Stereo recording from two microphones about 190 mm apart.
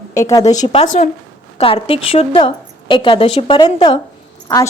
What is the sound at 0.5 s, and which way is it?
A woman's voice, 35° left (ahead or behind).